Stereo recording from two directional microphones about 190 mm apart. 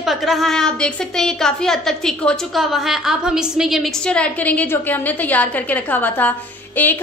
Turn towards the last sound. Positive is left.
turn(degrees=10)  # may be behind; listen again after turning